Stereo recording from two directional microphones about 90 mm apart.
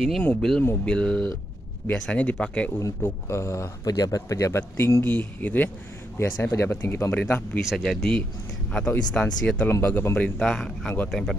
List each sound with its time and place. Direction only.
0.4 s a man's voice: 5° left (ahead or behind)
3.0 s speech: 30° left (ahead or behind)
6.1 s a man's voice: 30° left (ahead or behind)
7.7 s speech: 5° left (ahead or behind)
8.7 s a man's voice: 15° left (ahead or behind)